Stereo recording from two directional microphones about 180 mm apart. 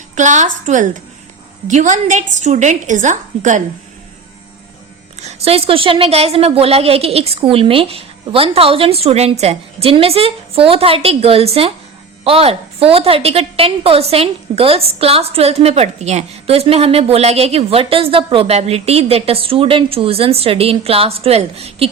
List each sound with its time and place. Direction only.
0.2 s a woman's voice: 45° right (ahead or behind)
5.2 s a woman's voice: 35° right (ahead or behind)